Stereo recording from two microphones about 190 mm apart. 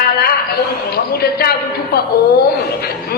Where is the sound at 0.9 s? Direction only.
55° left (ahead or behind).